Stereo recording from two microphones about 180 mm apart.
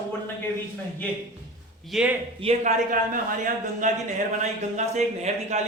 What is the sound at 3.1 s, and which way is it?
Speech, 50° right (ahead or behind).